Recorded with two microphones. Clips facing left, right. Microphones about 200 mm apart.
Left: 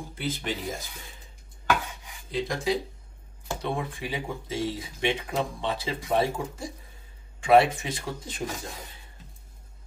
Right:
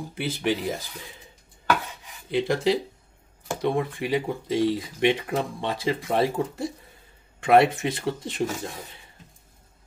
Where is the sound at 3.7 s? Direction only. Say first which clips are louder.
Right 7 dB; 60° right (ahead or behind).